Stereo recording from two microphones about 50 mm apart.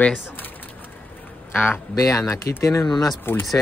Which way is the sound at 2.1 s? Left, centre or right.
Left.